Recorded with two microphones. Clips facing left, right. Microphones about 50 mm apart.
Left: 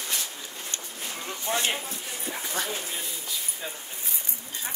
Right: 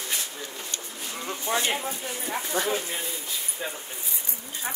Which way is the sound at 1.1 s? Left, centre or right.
Centre.